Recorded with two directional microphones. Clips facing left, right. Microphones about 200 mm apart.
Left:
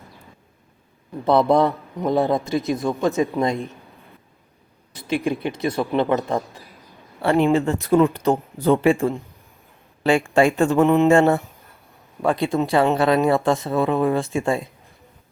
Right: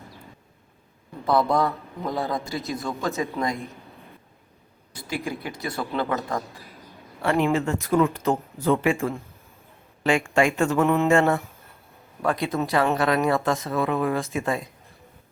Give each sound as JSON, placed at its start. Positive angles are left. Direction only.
{"t": 1.2, "sound": "a man's voice", "side_deg": 25}
{"t": 5.0, "sound": "a man's voice", "side_deg": 20}
{"t": 10.8, "sound": "a sound", "side_deg": 20}
{"t": 11.1, "sound": "a man's voice", "side_deg": 30}